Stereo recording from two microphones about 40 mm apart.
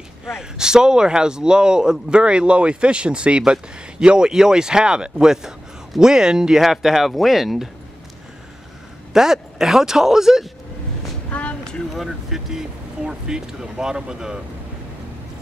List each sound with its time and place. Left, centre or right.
0.3 s a man's voice: centre
9.1 s speech: centre
11.3 s a sound: left
11.9 s speech: centre